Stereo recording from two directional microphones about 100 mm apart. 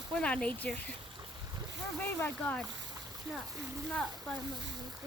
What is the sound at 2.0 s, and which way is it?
Speech, 15° left (ahead or behind).